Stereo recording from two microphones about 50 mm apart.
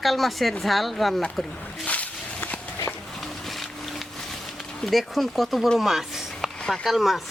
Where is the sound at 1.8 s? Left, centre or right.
Left.